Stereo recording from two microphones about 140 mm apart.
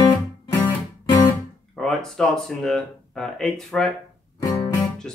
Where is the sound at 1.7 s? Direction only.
5° left (ahead or behind).